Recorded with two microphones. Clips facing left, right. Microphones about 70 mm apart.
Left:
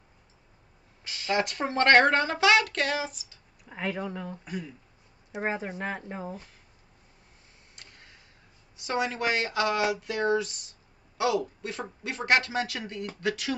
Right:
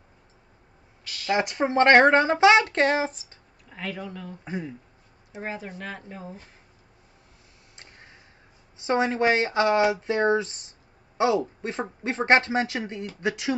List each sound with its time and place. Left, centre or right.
1.0 s a sound: left
1.3 s a woman's voice: right
3.6 s speech: left
4.5 s a woman's voice: right
5.3 s speech: left
7.7 s a sound: right
8.7 s a woman's voice: right